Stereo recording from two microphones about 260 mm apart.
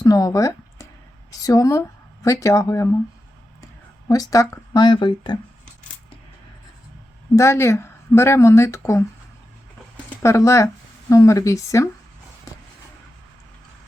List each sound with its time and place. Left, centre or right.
0.0 s speech: centre
4.1 s speech: centre
7.3 s speech: centre
10.2 s speech: centre